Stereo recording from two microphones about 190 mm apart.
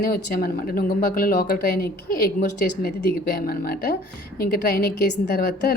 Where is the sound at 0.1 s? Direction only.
50° left (ahead or behind).